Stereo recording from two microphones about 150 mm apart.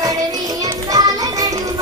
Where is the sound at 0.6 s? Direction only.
25° right (ahead or behind).